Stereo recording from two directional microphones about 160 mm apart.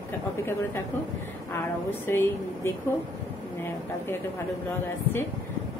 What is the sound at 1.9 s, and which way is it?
Speech, 15° left (ahead or behind).